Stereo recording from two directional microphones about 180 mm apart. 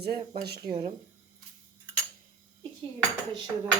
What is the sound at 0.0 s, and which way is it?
Speech, 60° right (ahead or behind).